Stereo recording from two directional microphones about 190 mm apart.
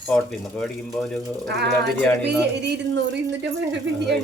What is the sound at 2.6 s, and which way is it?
Speech, 60° right (ahead or behind).